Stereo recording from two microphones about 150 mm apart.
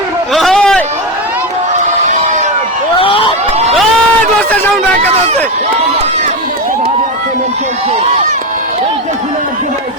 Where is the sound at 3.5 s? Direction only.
45° right (ahead or behind).